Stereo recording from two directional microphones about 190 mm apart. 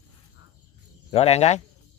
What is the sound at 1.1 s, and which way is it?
Speech, 30° left (ahead or behind).